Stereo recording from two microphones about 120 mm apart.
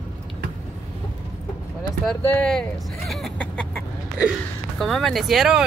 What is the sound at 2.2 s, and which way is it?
Speech, 15° left (ahead or behind).